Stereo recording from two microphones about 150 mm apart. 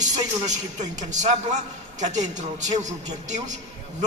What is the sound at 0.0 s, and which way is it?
A man's voice, 50° right (ahead or behind).